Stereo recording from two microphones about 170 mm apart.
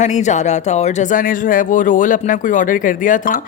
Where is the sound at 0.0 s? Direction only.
45° left (ahead or behind).